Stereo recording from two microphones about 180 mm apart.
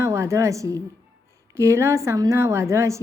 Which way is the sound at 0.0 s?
15° right (ahead or behind).